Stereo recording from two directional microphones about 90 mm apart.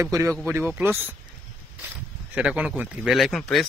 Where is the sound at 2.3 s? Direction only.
15° right (ahead or behind).